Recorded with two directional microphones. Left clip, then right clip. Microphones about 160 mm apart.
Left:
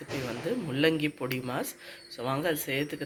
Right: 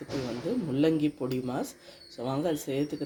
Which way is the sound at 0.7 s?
40° right (ahead or behind).